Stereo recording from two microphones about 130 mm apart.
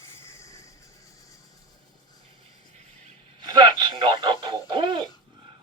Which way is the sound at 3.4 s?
35° right (ahead or behind).